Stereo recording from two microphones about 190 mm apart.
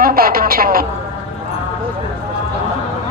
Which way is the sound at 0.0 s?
50° right (ahead or behind).